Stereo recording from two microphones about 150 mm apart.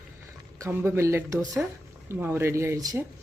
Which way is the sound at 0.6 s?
15° right (ahead or behind).